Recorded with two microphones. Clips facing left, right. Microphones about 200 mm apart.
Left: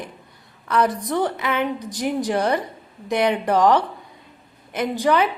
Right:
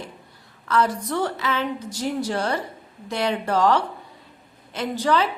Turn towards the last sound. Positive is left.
turn(degrees=15)  # may be behind; listen again after turning